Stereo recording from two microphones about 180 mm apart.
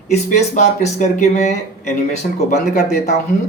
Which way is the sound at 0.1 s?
40° left (ahead or behind).